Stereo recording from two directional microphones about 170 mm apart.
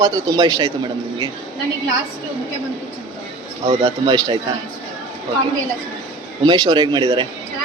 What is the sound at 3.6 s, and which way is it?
Speech, 35° right (ahead or behind).